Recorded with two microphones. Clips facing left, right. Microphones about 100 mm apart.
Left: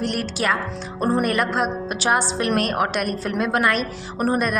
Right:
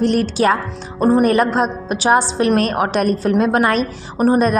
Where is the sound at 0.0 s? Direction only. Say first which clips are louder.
Right 8 dB; 30° right (ahead or behind).